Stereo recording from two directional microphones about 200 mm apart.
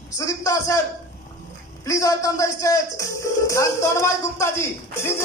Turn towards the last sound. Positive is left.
turn(degrees=15)  # may be behind; listen again after turning